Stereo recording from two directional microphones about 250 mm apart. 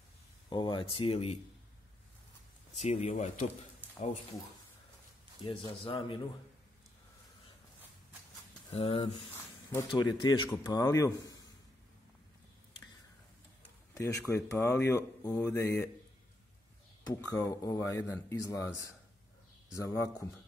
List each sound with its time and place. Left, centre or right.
0.5 s speech: centre
2.8 s speech: left
5.4 s speech: left
8.7 s speech: left
13.9 s speech: centre
17.1 s speech: centre
19.8 s speech: centre